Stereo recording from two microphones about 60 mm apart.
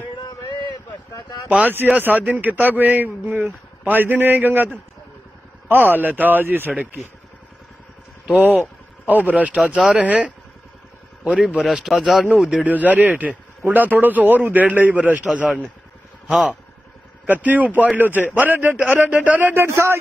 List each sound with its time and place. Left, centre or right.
1.5 s a man's voice: right
5.7 s speech: right
8.4 s a man's voice: right
11.5 s speech: centre
12.6 s a man's voice: right
16.3 s speech: centre
17.3 s a man's voice: right
18.9 s a man's voice: right
19.5 s a man's voice: right